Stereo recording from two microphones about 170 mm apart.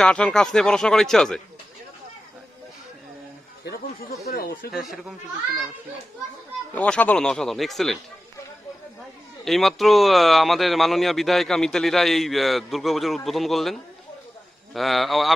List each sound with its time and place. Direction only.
0.0 s speech: 5° left (ahead or behind)
4.3 s speech: 60° left (ahead or behind)
6.7 s speech: 10° left (ahead or behind)
9.4 s speech: centre (ahead or behind)